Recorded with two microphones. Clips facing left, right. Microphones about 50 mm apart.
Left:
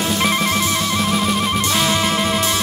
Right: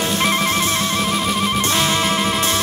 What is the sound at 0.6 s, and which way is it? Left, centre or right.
Music, right.